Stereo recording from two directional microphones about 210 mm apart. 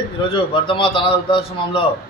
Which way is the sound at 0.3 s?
25° left (ahead or behind).